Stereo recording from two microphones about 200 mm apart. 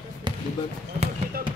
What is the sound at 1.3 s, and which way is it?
Basketball bounce, 45° right (ahead or behind).